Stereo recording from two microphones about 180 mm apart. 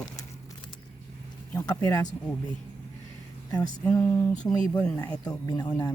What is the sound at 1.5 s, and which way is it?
Speech, 15° left (ahead or behind).